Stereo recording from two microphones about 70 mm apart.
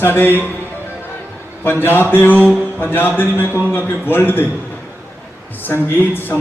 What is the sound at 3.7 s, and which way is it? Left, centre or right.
Speech, left.